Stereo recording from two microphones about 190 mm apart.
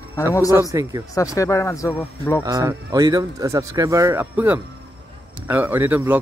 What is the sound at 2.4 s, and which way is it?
Speech, 20° right (ahead or behind).